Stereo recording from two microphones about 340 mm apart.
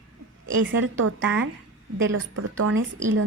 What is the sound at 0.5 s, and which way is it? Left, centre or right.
A woman's voice, right.